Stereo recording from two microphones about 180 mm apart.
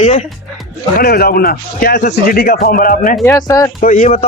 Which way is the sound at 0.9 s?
55° left (ahead or behind).